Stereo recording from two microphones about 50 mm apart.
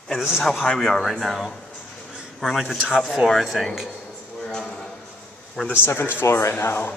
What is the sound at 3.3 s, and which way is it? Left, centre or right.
Speech, centre.